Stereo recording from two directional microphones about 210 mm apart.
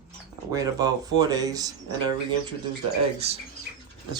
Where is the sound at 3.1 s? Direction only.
30° right (ahead or behind).